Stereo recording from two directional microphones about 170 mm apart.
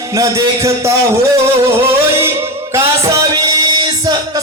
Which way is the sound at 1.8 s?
15° right (ahead or behind).